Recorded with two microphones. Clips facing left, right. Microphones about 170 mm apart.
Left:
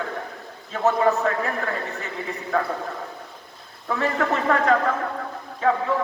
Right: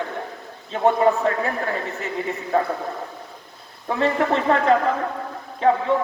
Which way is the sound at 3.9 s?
25° right (ahead or behind).